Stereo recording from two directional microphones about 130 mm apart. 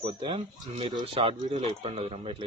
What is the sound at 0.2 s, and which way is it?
Speech, 40° right (ahead or behind).